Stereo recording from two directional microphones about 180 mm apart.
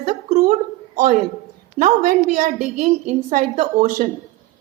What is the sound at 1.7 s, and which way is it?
A woman's voice, 50° right (ahead or behind).